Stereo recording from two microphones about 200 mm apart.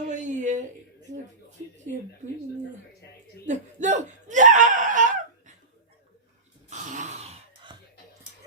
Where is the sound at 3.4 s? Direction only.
35° right (ahead or behind).